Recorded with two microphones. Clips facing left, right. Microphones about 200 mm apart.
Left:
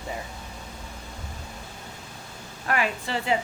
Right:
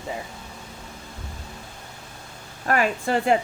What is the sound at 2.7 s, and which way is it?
Speech, 45° right (ahead or behind).